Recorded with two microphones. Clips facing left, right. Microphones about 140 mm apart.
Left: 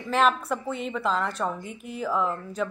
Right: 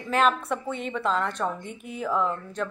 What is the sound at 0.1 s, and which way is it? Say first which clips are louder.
A woman's voice: even; centre (ahead or behind).